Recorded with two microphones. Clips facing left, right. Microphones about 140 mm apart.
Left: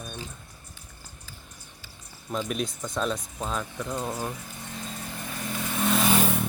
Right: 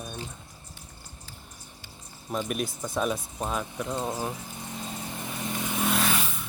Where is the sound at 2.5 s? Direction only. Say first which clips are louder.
Even; 5° right (ahead or behind); by 4.2 s 20° right (ahead or behind).